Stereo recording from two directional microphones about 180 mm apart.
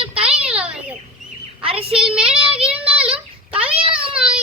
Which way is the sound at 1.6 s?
30° right (ahead or behind).